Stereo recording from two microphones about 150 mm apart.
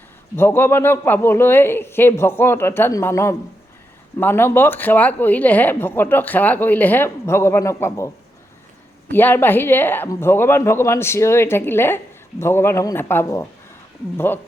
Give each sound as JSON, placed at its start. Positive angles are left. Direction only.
{"t": 0.3, "sound": "speech", "side_deg": 15}
{"t": 9.1, "sound": "speech", "side_deg": 15}